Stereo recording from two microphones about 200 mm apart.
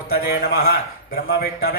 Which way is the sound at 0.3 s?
50° left (ahead or behind).